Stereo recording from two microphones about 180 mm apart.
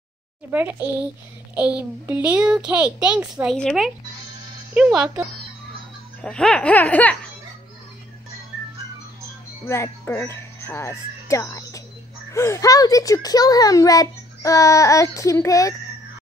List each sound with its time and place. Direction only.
0.5 s a child's voice: 10° right (ahead or behind)
6.2 s baby laughter: 5° left (ahead or behind)
9.7 s a child's voice: 15° left (ahead or behind)